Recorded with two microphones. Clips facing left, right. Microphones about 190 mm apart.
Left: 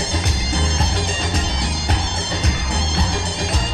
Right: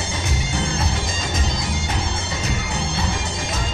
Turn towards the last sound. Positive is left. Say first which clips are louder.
# left 3 dB
turn(degrees=35)  # may be behind; listen again after turning